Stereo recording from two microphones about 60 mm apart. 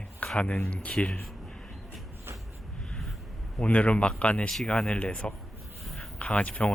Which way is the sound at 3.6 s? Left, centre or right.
Left.